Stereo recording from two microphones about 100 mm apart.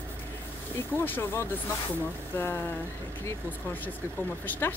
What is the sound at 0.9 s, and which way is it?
Speech, 20° left (ahead or behind).